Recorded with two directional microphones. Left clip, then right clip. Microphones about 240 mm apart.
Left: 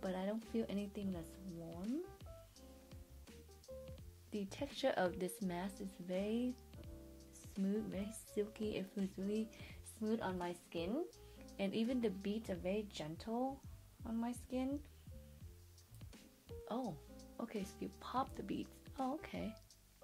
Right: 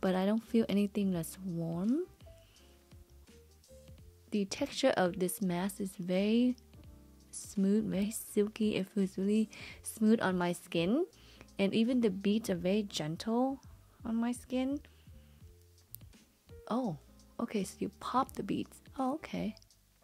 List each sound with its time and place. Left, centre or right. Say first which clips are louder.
0.0 s speech: right 10 dB; right
4.3 s speech: right 10 dB; right
7.6 s speech: right 9 dB; right
11.5 s speech: right 9 dB; right
14.0 s speech: right 8 dB; right
16.6 s speech: right 8 dB; right